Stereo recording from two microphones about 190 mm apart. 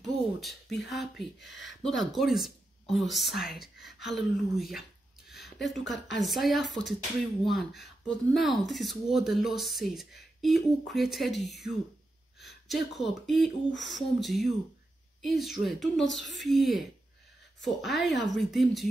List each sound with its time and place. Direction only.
0.0 s speech: centre (ahead or behind)
1.4 s speech: 75° left (ahead or behind)
1.8 s speech: centre (ahead or behind)
5.3 s a sound: centre (ahead or behind)
6.1 s speech: centre (ahead or behind)